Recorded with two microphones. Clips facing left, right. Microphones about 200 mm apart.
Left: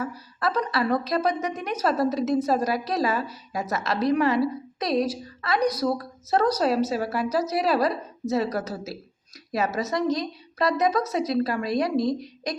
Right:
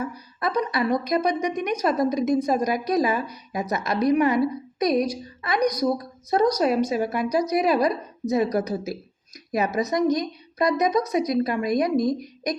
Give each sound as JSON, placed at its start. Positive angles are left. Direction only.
{"t": 0.0, "sound": "a woman's voice", "side_deg": -15}